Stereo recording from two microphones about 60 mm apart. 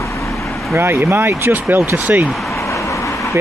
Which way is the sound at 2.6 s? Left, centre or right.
Left.